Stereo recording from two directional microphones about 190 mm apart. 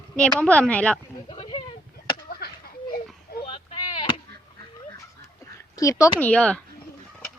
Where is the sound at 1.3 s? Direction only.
30° left (ahead or behind).